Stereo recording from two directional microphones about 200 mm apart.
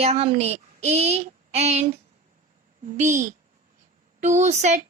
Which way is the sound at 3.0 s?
40° right (ahead or behind).